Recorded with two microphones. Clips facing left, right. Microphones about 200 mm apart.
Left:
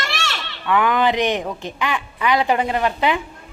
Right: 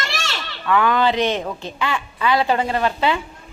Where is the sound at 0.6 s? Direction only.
20° left (ahead or behind).